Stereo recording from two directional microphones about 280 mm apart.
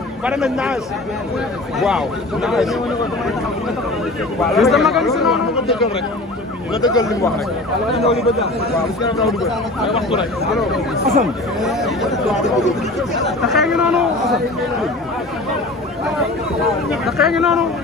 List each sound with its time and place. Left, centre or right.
0.2 s speech: centre
1.8 s speech: centre
4.4 s speech: centre
6.8 s speech: centre
9.2 s speech: centre
13.5 s speech: centre
17.0 s speech: centre